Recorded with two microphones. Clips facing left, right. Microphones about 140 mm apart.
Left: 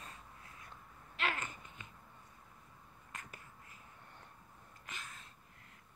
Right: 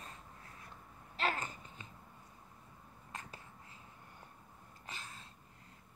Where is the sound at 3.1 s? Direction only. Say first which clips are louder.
Right 3 dB; 30° right (ahead or behind).